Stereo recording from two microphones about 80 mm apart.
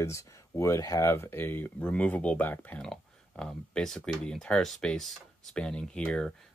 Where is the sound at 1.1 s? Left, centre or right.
Left.